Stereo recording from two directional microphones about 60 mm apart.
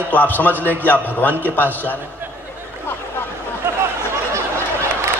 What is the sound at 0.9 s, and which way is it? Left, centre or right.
A man's voice, left.